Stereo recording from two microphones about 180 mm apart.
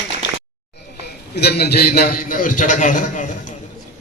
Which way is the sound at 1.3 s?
65° left (ahead or behind).